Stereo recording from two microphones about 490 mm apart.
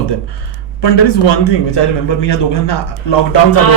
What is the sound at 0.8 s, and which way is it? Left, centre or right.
Speech, left.